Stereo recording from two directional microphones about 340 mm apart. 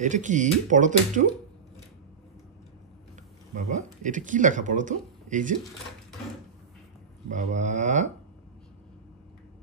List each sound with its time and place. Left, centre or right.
0.0 s speech: right
3.5 s speech: right
7.2 s speech: right